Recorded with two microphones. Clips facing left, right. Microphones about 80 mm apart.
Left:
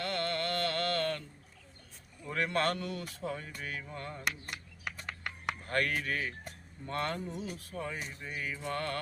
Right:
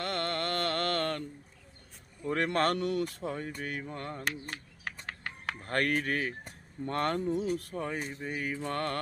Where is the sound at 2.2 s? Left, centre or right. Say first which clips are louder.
Right 3 dB; right.